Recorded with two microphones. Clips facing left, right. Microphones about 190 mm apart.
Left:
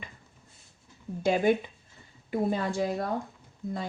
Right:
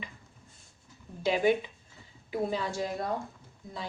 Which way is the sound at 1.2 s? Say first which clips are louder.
Left 2 dB; 50° left (ahead or behind).